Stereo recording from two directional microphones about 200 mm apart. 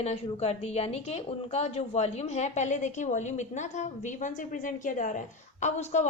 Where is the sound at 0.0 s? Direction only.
30° left (ahead or behind).